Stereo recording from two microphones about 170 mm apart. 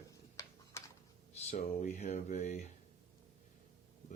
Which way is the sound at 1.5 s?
40° left (ahead or behind).